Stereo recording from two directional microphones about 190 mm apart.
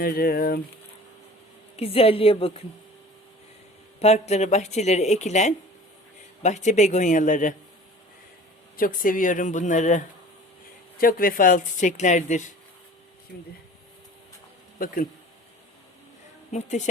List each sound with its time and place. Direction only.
0.0 s speech: 55° left (ahead or behind)
1.7 s speech: 30° left (ahead or behind)
4.0 s speech: 35° left (ahead or behind)
8.7 s speech: 50° left (ahead or behind)
16.5 s speech: 35° left (ahead or behind)